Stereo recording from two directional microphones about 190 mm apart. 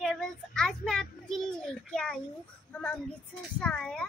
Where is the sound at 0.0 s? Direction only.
Centre (ahead or behind).